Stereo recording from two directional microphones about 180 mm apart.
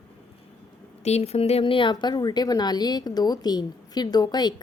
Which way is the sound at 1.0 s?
35° left (ahead or behind).